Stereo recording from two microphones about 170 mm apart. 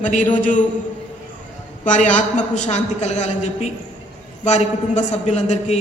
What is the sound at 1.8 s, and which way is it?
A man's voice, 45° left (ahead or behind).